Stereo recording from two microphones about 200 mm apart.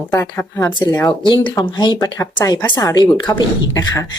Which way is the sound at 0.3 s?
15° left (ahead or behind).